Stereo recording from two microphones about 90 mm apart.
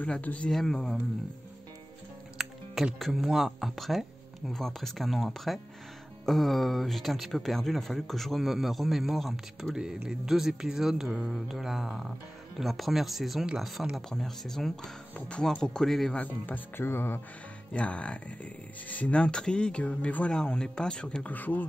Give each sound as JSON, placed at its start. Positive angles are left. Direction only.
{"t": 0.0, "sound": "speech", "side_deg": 15}
{"t": 0.5, "sound": "speech", "side_deg": 5}
{"t": 2.3, "sound": "speech", "side_deg": 0}
{"t": 16.4, "sound": "speech", "side_deg": 20}
{"t": 17.7, "sound": "speech", "side_deg": 15}